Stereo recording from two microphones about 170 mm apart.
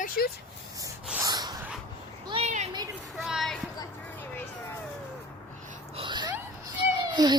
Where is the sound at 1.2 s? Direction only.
25° right (ahead or behind).